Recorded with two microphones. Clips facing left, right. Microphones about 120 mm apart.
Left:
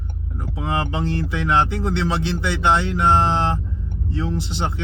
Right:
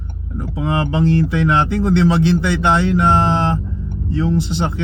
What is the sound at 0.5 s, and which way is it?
Speech, 60° right (ahead or behind).